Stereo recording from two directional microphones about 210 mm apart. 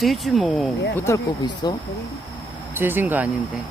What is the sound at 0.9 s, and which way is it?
Speech, 15° left (ahead or behind).